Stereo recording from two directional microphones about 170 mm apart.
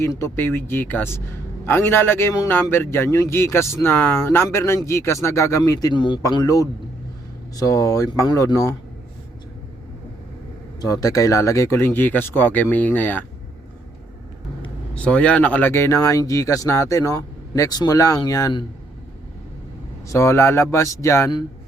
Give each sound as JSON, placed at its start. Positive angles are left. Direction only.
{"t": 0.0, "sound": "a man's voice", "side_deg": 15}
{"t": 10.8, "sound": "a man's voice", "side_deg": 20}
{"t": 14.9, "sound": "a man's voice", "side_deg": 10}
{"t": 20.1, "sound": "a man's voice", "side_deg": 15}